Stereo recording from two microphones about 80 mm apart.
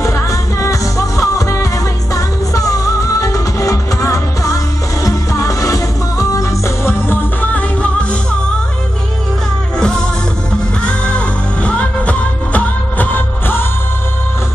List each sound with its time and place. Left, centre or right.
0.0 s music: left
7.5 s music: centre
9.8 s music: centre; by 13.7 s left